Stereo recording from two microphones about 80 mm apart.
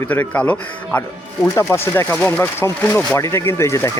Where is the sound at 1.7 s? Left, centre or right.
Left.